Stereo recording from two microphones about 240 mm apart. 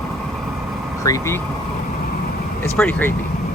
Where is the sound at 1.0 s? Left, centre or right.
Centre.